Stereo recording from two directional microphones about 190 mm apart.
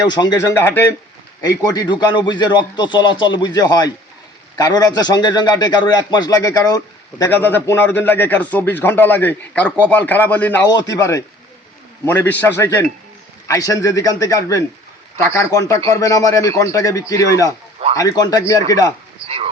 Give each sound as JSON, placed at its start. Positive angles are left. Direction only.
{"t": 0.1, "sound": "a man's voice", "side_deg": 20}
{"t": 10.7, "sound": "a man's voice", "side_deg": 20}